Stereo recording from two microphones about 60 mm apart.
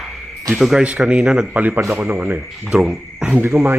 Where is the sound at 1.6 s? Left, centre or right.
Right.